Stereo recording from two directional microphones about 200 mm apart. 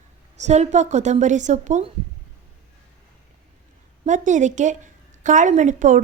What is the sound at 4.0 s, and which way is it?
A woman's voice, 40° right (ahead or behind).